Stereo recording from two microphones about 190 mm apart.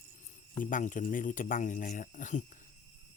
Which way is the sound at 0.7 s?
45° left (ahead or behind).